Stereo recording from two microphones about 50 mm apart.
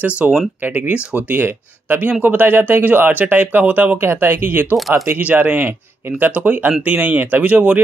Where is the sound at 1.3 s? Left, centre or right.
Right.